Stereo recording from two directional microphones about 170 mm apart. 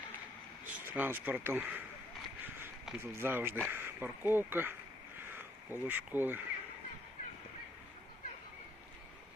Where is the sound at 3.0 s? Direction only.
15° right (ahead or behind).